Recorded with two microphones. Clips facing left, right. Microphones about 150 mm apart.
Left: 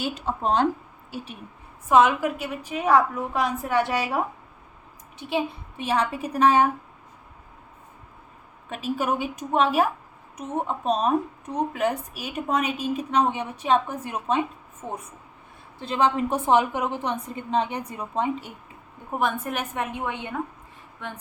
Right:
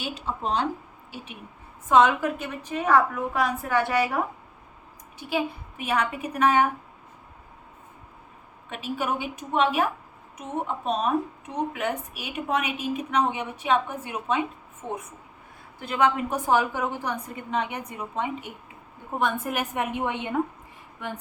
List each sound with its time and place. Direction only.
0.0 s a woman's voice: 45° left (ahead or behind)
1.9 s a woman's voice: 5° left (ahead or behind)
5.3 s a woman's voice: 30° left (ahead or behind)
8.7 s a woman's voice: 40° left (ahead or behind)
14.8 s speech: 5° left (ahead or behind)
15.8 s a woman's voice: 30° left (ahead or behind)
19.2 s a woman's voice: 5° right (ahead or behind)